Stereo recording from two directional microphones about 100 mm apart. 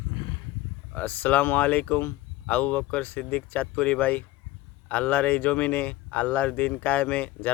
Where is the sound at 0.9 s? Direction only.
15° left (ahead or behind).